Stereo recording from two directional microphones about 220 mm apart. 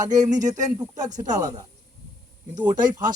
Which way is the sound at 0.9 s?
35° right (ahead or behind).